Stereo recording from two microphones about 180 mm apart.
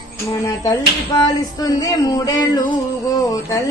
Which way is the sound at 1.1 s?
20° left (ahead or behind).